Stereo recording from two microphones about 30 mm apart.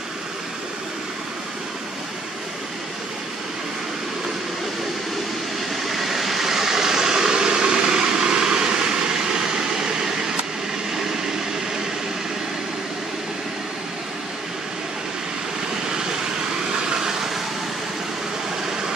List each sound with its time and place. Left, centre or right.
5.9 s vehicle: centre
16.9 s vehicle: centre